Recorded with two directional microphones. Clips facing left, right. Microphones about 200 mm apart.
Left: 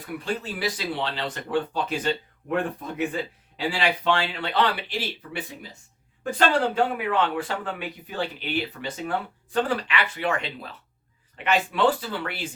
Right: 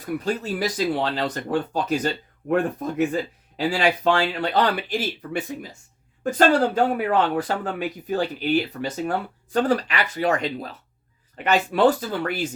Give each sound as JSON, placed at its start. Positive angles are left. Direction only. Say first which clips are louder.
{"t": 0.0, "sound": "speech", "louder": "right 4 dB", "side_deg": -40}